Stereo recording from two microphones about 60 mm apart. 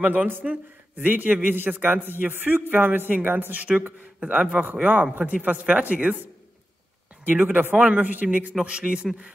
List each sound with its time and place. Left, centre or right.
0.0 s a man's voice: right
4.2 s a man's voice: right
7.2 s a man's voice: right
8.5 s a man's voice: centre